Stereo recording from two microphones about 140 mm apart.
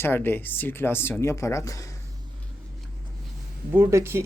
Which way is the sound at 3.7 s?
20° right (ahead or behind).